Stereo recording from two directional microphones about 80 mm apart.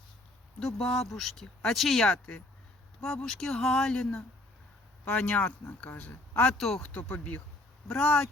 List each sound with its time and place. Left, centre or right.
0.6 s speech: centre
5.0 s speech: centre
6.6 s speech: centre
6.8 s speech: centre
7.9 s speech: centre